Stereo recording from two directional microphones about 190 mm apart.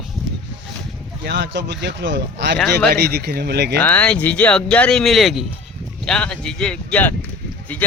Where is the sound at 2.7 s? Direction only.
60° right (ahead or behind).